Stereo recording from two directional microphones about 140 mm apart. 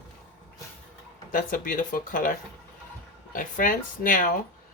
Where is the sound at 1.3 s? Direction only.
75° left (ahead or behind).